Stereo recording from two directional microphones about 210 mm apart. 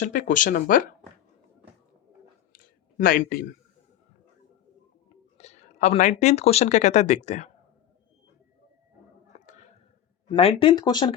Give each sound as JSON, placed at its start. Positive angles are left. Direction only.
{"t": 0.0, "sound": "speech", "side_deg": 40}
{"t": 2.5, "sound": "a sound", "side_deg": 45}
{"t": 5.4, "sound": "speech", "side_deg": 30}
{"t": 10.2, "sound": "speech", "side_deg": 25}